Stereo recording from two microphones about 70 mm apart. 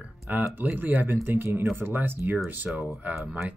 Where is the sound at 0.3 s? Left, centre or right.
Right.